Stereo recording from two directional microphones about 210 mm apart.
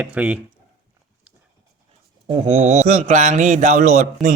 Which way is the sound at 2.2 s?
30° right (ahead or behind).